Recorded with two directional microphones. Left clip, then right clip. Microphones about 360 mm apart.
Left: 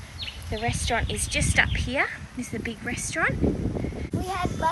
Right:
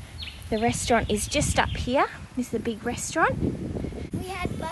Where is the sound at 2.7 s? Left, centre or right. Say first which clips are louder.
Right 1 dB; centre.